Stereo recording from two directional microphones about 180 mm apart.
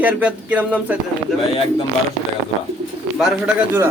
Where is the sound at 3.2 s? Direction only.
5° right (ahead or behind).